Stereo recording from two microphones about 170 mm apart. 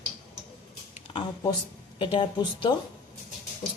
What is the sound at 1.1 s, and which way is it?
Speech, 25° left (ahead or behind).